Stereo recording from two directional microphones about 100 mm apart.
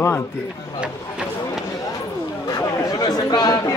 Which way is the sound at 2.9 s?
40° left (ahead or behind).